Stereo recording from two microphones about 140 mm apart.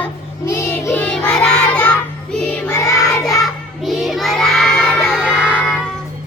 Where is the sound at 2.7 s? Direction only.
25° left (ahead or behind).